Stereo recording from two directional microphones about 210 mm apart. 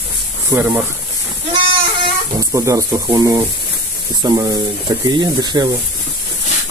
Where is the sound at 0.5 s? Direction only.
10° right (ahead or behind).